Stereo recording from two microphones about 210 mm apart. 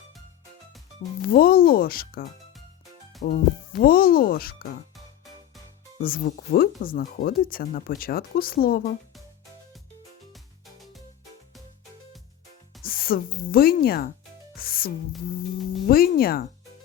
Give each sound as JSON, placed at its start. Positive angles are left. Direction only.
{"t": 1.3, "sound": "speech", "side_deg": 45}
{"t": 3.2, "sound": "speech", "side_deg": 45}
{"t": 6.0, "sound": "speech", "side_deg": 45}
{"t": 10.3, "sound": "music", "side_deg": 0}
{"t": 12.8, "sound": "speech", "side_deg": 45}
{"t": 14.6, "sound": "music", "side_deg": 45}
{"t": 15.9, "sound": "speech", "side_deg": 45}